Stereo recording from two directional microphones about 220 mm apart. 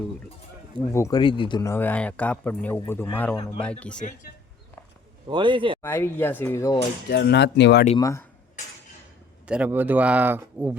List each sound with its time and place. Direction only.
0.9 s speech: 15° left (ahead or behind)
5.3 s speech: 20° right (ahead or behind)
5.8 s speech: 10° left (ahead or behind)
7.1 s speech: 50° left (ahead or behind)
7.9 s speech: 15° left (ahead or behind)
9.5 s speech: 10° right (ahead or behind)